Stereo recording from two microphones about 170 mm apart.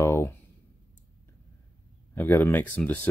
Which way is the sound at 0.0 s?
15° left (ahead or behind).